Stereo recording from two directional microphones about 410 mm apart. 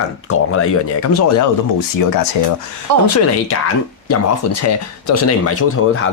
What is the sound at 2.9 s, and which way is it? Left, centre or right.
Speech, right.